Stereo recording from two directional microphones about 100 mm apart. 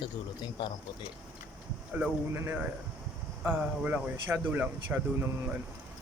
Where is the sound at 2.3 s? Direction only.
15° right (ahead or behind).